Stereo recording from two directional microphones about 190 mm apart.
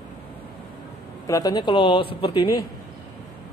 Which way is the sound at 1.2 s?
20° left (ahead or behind).